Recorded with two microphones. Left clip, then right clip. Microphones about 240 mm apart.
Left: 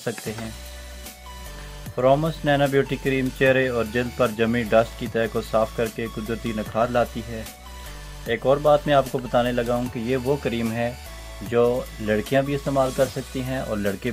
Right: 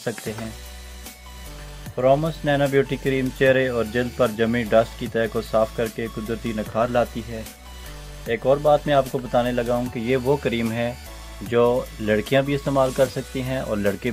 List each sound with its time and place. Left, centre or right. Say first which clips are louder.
0.0 s speech: right 1 dB; centre
2.0 s speech: right 1 dB; centre